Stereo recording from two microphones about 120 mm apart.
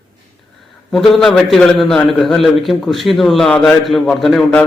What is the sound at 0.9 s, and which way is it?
A man's voice, 5° left (ahead or behind).